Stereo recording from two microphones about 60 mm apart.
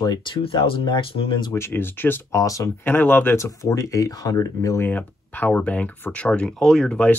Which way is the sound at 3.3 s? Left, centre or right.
Left.